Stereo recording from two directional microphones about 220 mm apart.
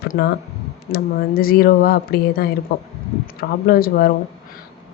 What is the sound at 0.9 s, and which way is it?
Speech, 45° left (ahead or behind).